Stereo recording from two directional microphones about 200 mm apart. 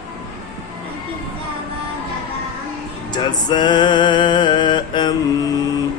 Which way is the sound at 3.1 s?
20° left (ahead or behind).